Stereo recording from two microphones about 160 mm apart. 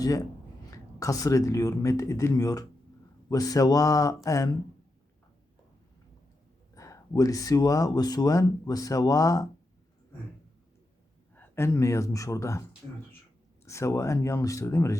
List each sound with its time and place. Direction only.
0.0 s speech: 20° left (ahead or behind)
6.7 s speech: 20° left (ahead or behind)
11.3 s speech: 15° left (ahead or behind)
13.7 s speech: 20° left (ahead or behind)